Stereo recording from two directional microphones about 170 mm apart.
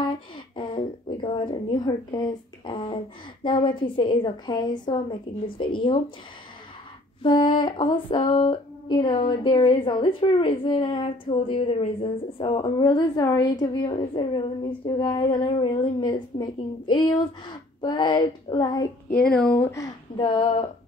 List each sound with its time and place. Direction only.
0.6 s a woman's voice: 30° left (ahead or behind)
7.2 s a woman's voice: 30° left (ahead or behind)
19.3 s speech: 5° left (ahead or behind)
20.2 s a woman's voice: 30° left (ahead or behind)